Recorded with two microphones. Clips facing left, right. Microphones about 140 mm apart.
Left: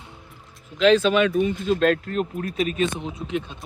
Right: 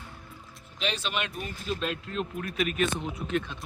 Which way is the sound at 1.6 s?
90° left.